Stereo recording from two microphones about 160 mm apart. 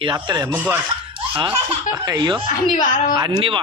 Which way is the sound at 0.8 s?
30° right (ahead or behind).